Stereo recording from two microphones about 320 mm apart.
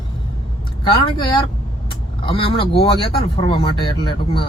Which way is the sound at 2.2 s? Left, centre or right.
Centre.